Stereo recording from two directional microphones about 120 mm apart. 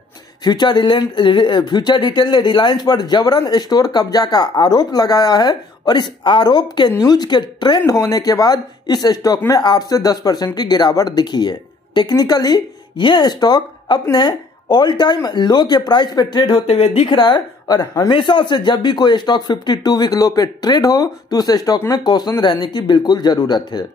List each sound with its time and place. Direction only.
0.4 s a woman's voice: 40° left (ahead or behind)
16.6 s a woman's voice: 60° left (ahead or behind)
17.1 s speech: 35° left (ahead or behind)
18.1 s speech: 40° left (ahead or behind)